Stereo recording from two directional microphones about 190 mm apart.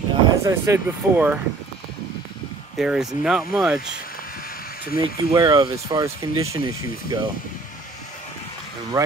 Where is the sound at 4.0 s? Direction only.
50° left (ahead or behind).